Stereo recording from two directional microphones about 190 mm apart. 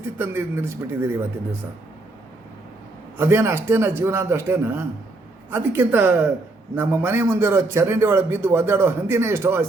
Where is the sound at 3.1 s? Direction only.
10° right (ahead or behind).